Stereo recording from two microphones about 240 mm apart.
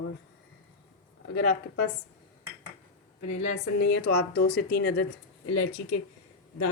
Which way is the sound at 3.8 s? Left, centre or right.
Left.